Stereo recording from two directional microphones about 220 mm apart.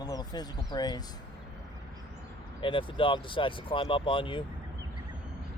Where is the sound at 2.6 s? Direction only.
25° left (ahead or behind).